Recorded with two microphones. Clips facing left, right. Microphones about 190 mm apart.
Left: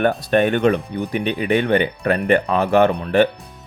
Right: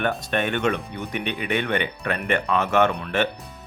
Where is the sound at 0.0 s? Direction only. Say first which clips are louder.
Left 8 dB; 40° left (ahead or behind).